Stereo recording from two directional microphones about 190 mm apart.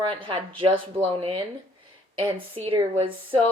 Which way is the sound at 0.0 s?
25° right (ahead or behind).